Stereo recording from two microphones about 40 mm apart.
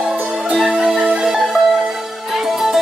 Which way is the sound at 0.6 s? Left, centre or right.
Centre.